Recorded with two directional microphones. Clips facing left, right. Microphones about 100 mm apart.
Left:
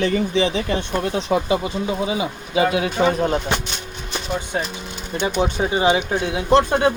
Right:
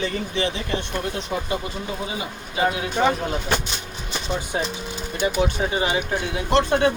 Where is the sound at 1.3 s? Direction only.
90° left.